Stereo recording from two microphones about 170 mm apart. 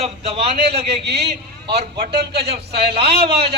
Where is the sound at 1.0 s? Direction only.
75° right (ahead or behind).